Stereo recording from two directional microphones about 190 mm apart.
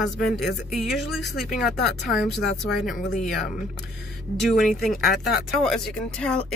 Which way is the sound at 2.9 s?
40° left (ahead or behind).